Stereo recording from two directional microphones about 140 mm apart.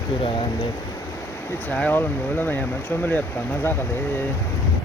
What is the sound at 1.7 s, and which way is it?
Speech, 10° left (ahead or behind).